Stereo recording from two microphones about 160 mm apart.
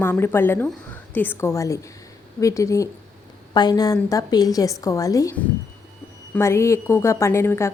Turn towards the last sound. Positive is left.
turn(degrees=15)  # may be behind; listen again after turning